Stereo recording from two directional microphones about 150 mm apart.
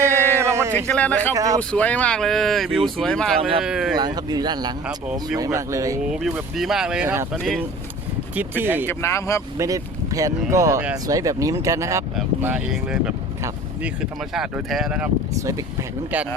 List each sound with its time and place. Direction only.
0.0 s a sound: 15° right (ahead or behind)
0.9 s speech: 10° left (ahead or behind)
1.3 s speech: 25° right (ahead or behind)
1.7 s speech: 10° left (ahead or behind)
3.9 s speech: 30° right (ahead or behind)
6.1 s speech: 5° right (ahead or behind)
8.4 s speech: 15° right (ahead or behind)
8.9 s speech: 15° left (ahead or behind)
9.6 s speech: 25° right (ahead or behind); by 13.1 s 5° right (ahead or behind)
14.3 s speech: centre (ahead or behind)
16.1 s speech: 10° right (ahead or behind)